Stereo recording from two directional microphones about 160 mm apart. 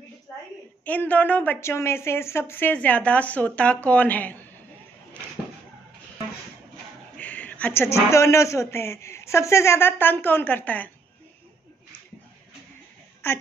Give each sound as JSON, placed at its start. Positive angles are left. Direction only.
{"t": 0.8, "sound": "a man's voice", "side_deg": 10}
{"t": 7.2, "sound": "a man's voice", "side_deg": 10}
{"t": 13.2, "sound": "a man's voice", "side_deg": 15}